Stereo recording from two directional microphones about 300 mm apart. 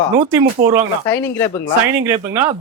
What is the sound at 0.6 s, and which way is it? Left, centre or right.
Speech, centre.